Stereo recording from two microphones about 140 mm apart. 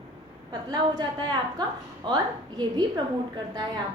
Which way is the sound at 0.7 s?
30° right (ahead or behind).